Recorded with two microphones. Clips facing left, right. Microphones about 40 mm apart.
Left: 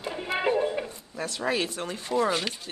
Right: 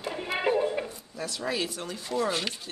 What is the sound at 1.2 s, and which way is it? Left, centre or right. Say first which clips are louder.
Speech: left 3 dB; left.